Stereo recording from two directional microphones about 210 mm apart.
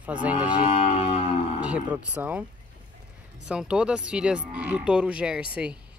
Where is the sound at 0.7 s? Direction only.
30° left (ahead or behind).